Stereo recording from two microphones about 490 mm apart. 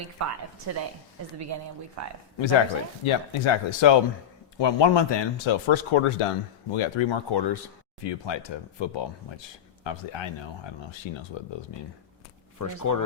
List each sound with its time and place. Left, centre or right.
0.2 s speech: right
2.0 s speech: right
3.0 s speech: left
11.3 s speech: left
12.5 s speech: left